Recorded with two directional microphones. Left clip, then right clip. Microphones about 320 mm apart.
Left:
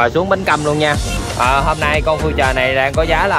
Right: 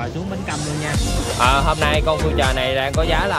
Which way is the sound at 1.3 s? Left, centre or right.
Centre.